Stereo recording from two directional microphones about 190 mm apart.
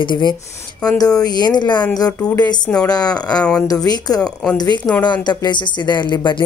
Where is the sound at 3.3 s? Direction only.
5° left (ahead or behind).